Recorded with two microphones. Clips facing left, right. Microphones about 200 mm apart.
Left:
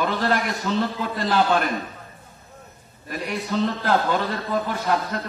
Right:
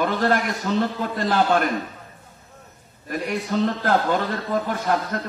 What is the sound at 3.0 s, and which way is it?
A man's voice, 45° right (ahead or behind).